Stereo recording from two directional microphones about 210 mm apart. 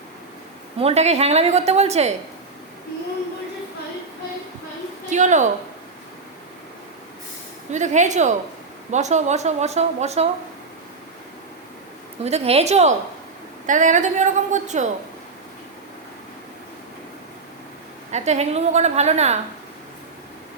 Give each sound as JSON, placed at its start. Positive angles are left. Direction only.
{"t": 0.8, "sound": "speech", "side_deg": -30}
{"t": 5.0, "sound": "a woman's voice", "side_deg": -35}
{"t": 7.7, "sound": "speech", "side_deg": -35}
{"t": 12.2, "sound": "speech", "side_deg": -30}
{"t": 18.1, "sound": "speech", "side_deg": -30}